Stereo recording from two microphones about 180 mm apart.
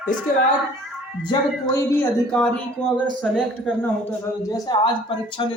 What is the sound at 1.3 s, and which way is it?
Speech, 15° left (ahead or behind).